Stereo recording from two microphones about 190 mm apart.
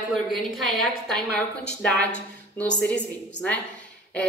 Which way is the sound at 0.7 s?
Centre (ahead or behind).